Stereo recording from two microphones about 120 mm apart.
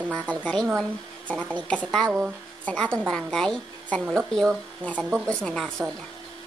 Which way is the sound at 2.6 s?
10° left (ahead or behind).